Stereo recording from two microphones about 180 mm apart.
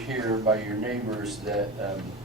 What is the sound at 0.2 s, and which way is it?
Speech, 20° right (ahead or behind).